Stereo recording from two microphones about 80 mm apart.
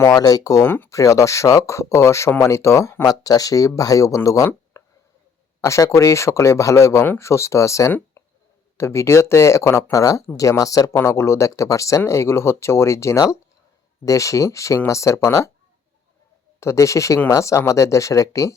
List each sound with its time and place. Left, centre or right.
0.1 s speech: left
4.7 s a sound: left
5.5 s speech: left
8.2 s a sound: left
8.8 s speech: left
10.9 s speech: left
16.6 s speech: left